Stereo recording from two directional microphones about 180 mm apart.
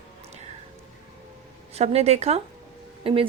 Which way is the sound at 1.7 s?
35° right (ahead or behind).